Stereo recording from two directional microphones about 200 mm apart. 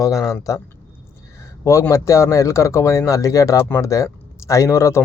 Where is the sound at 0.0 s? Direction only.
15° left (ahead or behind).